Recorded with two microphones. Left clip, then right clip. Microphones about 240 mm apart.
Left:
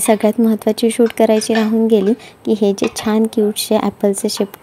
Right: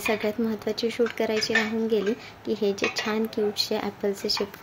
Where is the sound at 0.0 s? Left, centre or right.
Left.